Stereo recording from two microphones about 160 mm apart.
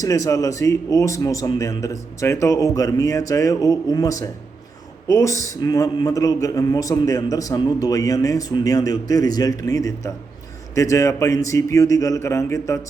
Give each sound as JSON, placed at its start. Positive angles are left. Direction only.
{"t": 0.0, "sound": "a man's voice", "side_deg": 20}